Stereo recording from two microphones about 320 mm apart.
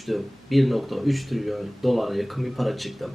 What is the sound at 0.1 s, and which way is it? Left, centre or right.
Speech, centre.